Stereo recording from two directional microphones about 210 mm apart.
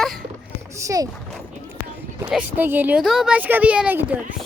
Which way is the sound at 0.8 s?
15° right (ahead or behind).